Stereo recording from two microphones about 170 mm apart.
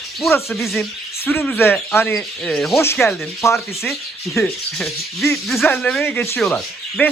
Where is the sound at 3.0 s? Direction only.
15° left (ahead or behind).